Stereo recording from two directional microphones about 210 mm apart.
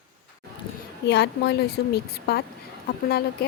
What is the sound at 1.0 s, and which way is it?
Speech, 55° left (ahead or behind).